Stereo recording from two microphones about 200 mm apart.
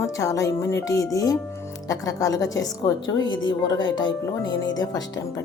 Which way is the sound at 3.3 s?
75° left (ahead or behind).